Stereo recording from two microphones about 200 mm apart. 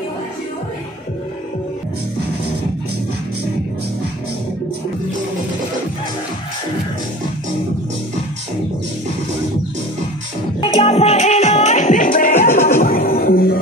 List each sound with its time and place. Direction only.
10.6 s music: 30° left (ahead or behind); by 13.6 s 50° left (ahead or behind)